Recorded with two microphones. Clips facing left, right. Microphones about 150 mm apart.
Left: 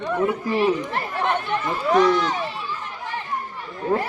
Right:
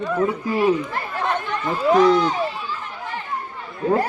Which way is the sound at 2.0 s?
30° right (ahead or behind).